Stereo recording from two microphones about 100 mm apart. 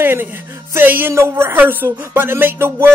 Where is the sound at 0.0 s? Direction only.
20° right (ahead or behind).